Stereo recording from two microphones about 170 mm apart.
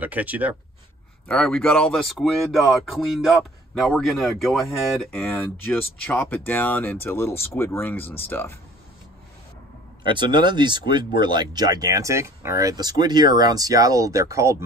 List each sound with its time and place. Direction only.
0.0 s speech: 10° right (ahead or behind)
1.2 s speech: 5° left (ahead or behind)
5.1 s speech: 10° left (ahead or behind)
10.0 s speech: 25° right (ahead or behind)